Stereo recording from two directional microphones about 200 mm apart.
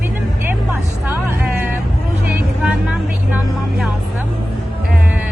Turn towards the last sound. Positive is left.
turn(degrees=-5)  # may be behind; listen again after turning